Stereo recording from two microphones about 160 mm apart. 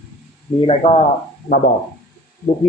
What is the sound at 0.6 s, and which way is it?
Speech, 35° left (ahead or behind).